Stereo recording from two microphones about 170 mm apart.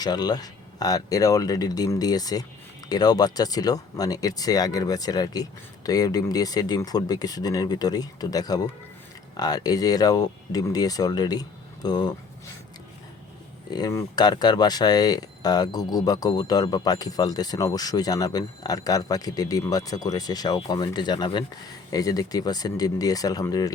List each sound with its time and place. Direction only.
0.0 s speech: 25° left (ahead or behind)
13.7 s speech: 20° left (ahead or behind)